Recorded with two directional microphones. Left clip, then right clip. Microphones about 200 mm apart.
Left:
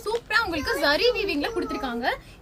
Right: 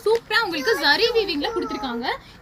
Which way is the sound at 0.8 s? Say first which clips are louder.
Right 2 dB; 50° left (ahead or behind).